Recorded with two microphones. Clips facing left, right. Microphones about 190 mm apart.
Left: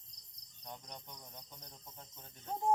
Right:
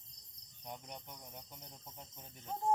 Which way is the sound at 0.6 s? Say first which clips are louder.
Right 2 dB; 10° right (ahead or behind).